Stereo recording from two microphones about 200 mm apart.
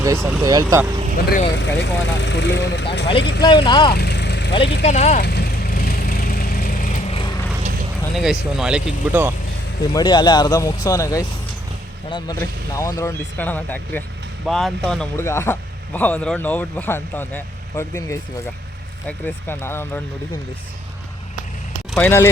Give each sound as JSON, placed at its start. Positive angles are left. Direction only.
{"t": 0.0, "sound": "speech", "side_deg": -15}
{"t": 1.5, "sound": "speech", "side_deg": 65}
{"t": 3.4, "sound": "speech", "side_deg": 25}
{"t": 3.9, "sound": "vehicle", "side_deg": 55}
{"t": 4.8, "sound": "speech", "side_deg": 35}
{"t": 5.2, "sound": "vehicle", "side_deg": 50}
{"t": 7.1, "sound": "vehicle", "side_deg": 25}
{"t": 8.1, "sound": "speech", "side_deg": 0}
{"t": 9.9, "sound": "speech", "side_deg": 20}
{"t": 12.4, "sound": "speech", "side_deg": 15}
{"t": 21.9, "sound": "speech", "side_deg": 10}